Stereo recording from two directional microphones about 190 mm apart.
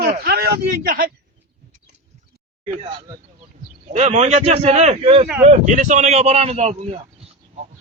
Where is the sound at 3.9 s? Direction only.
35° right (ahead or behind).